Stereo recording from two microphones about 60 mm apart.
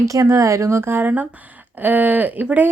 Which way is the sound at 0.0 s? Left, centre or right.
Right.